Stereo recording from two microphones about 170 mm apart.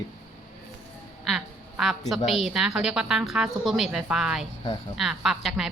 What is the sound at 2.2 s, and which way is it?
A woman's voice, centre (ahead or behind).